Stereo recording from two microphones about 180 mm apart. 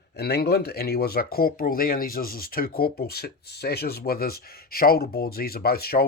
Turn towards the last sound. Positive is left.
turn(degrees=60)  # may be behind; listen again after turning